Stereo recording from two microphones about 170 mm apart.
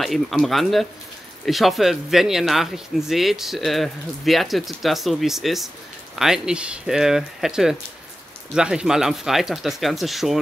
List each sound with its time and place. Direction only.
0.0 s speech: centre (ahead or behind)